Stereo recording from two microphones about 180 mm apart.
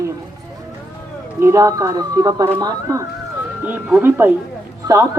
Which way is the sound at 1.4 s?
20° right (ahead or behind).